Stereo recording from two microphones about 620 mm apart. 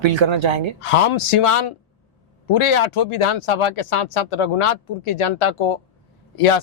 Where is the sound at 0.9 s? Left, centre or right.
Left.